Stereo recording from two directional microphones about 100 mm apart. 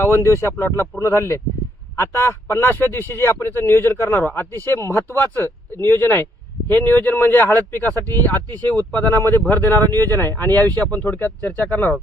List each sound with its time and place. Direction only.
0.0 s speech: 25° left (ahead or behind)